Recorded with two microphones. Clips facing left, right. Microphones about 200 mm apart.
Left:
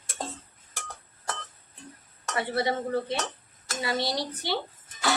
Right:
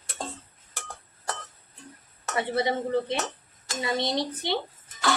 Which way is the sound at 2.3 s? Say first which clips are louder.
Right 1 dB; 20° right (ahead or behind).